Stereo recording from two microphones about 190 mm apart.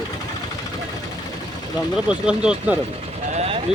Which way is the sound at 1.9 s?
5° right (ahead or behind).